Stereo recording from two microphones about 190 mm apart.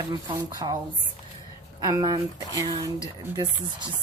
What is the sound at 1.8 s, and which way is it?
Speech, 20° right (ahead or behind).